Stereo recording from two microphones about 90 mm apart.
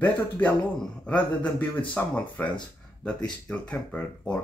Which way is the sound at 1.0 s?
15° left (ahead or behind).